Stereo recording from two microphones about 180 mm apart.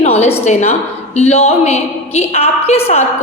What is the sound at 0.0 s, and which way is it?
A woman's voice, 35° left (ahead or behind).